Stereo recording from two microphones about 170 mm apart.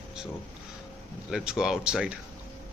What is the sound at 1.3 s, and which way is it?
Speech, 5° right (ahead or behind).